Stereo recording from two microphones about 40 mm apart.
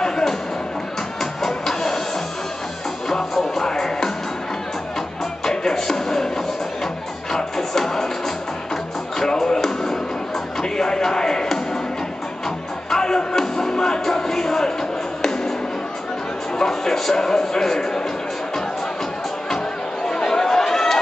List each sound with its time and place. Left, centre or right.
0.0 s a sound: centre
1.2 s music: centre
3.1 s music: centre
5.4 s music: centre
9.4 s music: centre
16.5 s a sound: centre
20.1 s chatter: centre